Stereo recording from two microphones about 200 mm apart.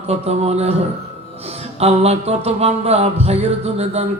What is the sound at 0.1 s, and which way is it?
Music, 30° right (ahead or behind).